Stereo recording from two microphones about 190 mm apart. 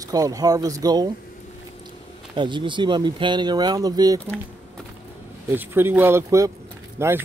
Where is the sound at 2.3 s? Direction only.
25° right (ahead or behind).